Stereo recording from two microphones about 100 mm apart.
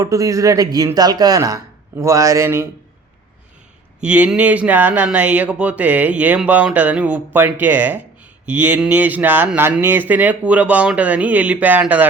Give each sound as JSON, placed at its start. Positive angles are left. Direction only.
{"t": 0.0, "sound": "speech", "side_deg": -35}
{"t": 4.0, "sound": "speech", "side_deg": -15}